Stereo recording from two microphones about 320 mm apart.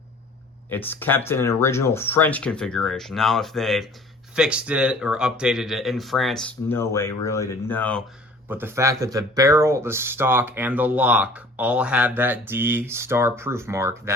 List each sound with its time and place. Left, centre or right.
0.7 s speech: centre
8.4 s speech: centre